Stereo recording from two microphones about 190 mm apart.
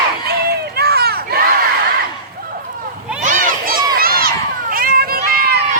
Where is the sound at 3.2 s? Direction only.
45° right (ahead or behind).